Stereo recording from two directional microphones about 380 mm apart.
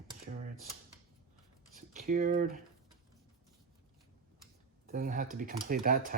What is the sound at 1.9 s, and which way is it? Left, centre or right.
Speech, centre.